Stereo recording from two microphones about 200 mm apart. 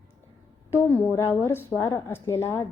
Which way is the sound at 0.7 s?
10° left (ahead or behind).